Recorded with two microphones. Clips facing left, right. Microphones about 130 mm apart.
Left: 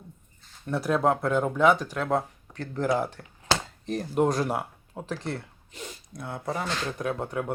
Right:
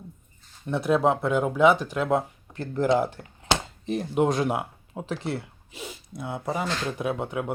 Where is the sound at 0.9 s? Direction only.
5° right (ahead or behind).